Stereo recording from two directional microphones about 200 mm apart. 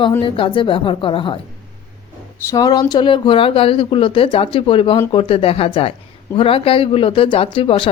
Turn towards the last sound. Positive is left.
turn(degrees=25)  # may be behind; listen again after turning